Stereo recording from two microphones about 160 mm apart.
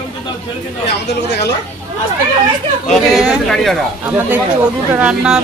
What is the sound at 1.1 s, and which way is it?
Speech, 90° left.